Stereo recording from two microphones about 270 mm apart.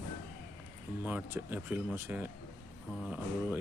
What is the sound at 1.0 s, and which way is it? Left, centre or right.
Speech, centre.